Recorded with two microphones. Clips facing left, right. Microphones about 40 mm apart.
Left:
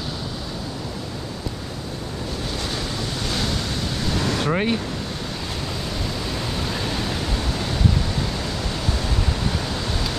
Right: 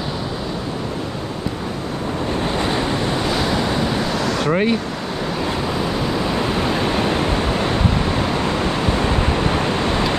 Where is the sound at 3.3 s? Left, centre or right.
Centre.